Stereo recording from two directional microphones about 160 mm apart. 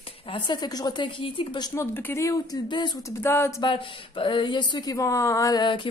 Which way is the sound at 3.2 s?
15° left (ahead or behind).